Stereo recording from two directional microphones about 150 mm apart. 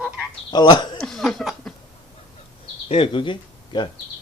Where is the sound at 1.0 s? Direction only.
Centre (ahead or behind).